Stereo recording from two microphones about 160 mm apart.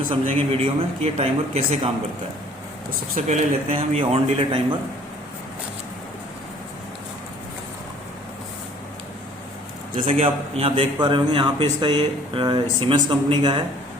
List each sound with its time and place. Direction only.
0.1 s a man's voice: 35° right (ahead or behind)
3.2 s a man's voice: 45° right (ahead or behind)
9.9 s a man's voice: 35° right (ahead or behind)